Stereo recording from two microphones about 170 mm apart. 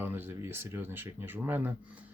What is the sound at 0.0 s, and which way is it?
Speech, 10° right (ahead or behind).